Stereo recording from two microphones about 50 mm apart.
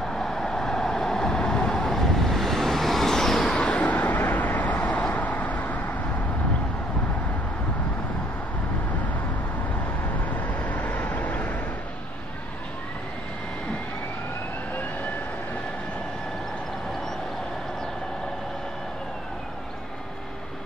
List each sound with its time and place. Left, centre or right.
0.1 s vehicle: centre
3.6 s vehicle: left
10.2 s vehicle: left